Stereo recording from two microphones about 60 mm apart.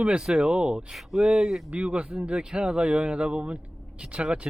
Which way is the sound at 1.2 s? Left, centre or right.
Centre.